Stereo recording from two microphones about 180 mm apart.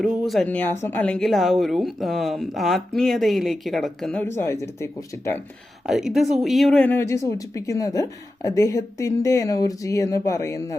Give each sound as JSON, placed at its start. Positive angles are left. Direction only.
{"t": 0.0, "sound": "speech", "side_deg": 0}
{"t": 5.8, "sound": "speech", "side_deg": 0}